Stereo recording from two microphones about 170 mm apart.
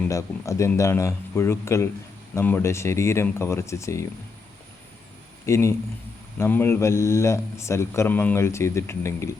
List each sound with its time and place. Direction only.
0.0 s speech: 20° left (ahead or behind)
5.5 s speech: 15° left (ahead or behind)